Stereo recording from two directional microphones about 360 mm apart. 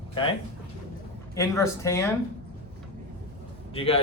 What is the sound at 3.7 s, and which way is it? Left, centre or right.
Speech, centre.